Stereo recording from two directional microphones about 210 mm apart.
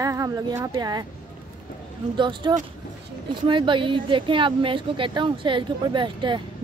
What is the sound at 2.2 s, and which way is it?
Speech, 20° right (ahead or behind).